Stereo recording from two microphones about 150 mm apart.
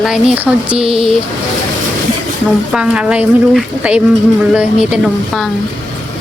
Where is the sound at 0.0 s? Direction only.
5° right (ahead or behind).